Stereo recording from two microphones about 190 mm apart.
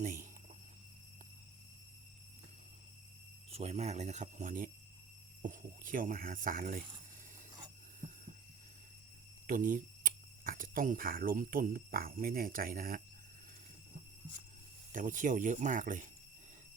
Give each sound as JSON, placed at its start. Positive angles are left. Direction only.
{"t": 0.0, "sound": "speech", "side_deg": -40}
{"t": 3.5, "sound": "speech", "side_deg": -35}
{"t": 9.5, "sound": "speech", "side_deg": -45}
{"t": 14.9, "sound": "speech", "side_deg": -45}